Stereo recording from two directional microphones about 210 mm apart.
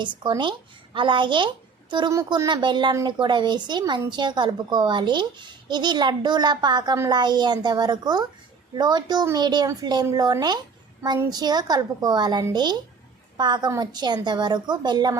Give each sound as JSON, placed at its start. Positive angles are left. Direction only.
{"t": 0.2, "sound": "a woman's voice", "side_deg": -20}